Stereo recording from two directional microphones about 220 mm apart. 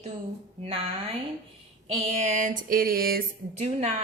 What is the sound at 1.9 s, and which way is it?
Speech, 30° right (ahead or behind).